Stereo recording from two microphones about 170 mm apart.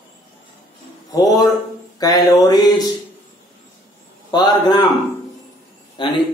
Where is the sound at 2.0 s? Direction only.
20° left (ahead or behind).